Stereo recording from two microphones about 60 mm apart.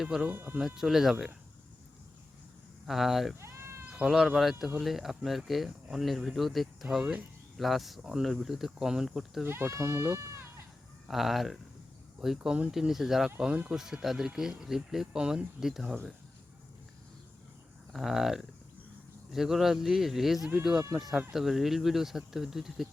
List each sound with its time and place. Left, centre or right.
0.0 s speech: centre
2.8 s speech: centre
3.3 s cat: right
4.0 s speech: centre
9.5 s speech: right
11.1 s speech: centre
17.9 s speech: centre